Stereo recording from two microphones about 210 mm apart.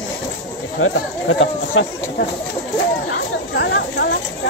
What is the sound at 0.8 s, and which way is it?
Speech, 70° left (ahead or behind).